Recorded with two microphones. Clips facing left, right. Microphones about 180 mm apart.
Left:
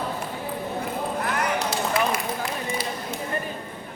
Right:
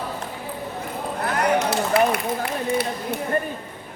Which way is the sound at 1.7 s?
60° right (ahead or behind).